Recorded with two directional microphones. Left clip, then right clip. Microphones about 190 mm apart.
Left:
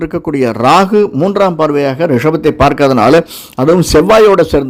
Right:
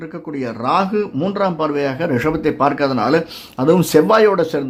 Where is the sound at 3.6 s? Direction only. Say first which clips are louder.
Left 5 dB; 30° left (ahead or behind).